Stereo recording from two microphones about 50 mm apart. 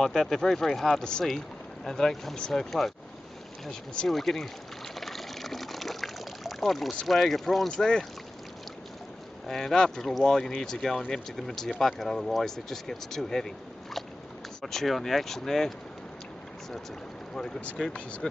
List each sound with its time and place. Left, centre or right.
0.0 s speech: centre
4.1 s speech: centre
5.0 s water: centre
7.1 s speech: centre
7.7 s speech: centre
9.5 s speech: centre
14.6 s speech: centre
17.8 s speech: centre